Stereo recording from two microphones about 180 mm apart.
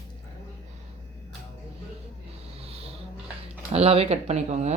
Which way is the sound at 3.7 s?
35° right (ahead or behind).